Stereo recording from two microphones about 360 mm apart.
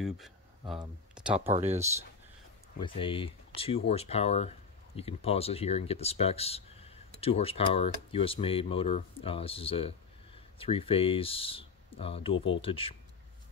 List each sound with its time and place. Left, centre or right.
0.0 s speech: centre
1.5 s speech: centre
2.8 s speech: centre